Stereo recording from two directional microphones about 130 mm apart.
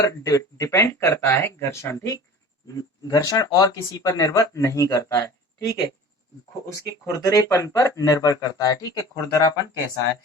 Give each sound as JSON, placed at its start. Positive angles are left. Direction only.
{"t": 0.0, "sound": "speech", "side_deg": 25}
{"t": 6.8, "sound": "speech", "side_deg": 25}